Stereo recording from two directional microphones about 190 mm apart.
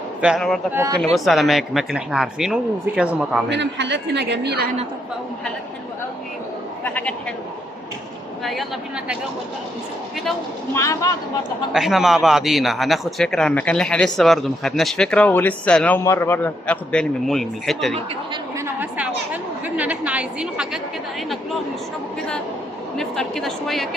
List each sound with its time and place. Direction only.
0.2 s a man's voice: centre (ahead or behind)
0.7 s speech: 15° right (ahead or behind)
1.1 s a man's voice: centre (ahead or behind)
3.5 s a woman's voice: 65° right (ahead or behind)
6.8 s speech: 10° left (ahead or behind)
10.8 s speech: 15° left (ahead or behind)
11.7 s a man's voice: centre (ahead or behind)
18.5 s a sound: 10° right (ahead or behind)
23.0 s a man's voice: centre (ahead or behind)